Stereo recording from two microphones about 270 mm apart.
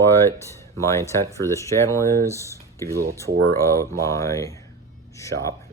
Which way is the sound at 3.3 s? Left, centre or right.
Right.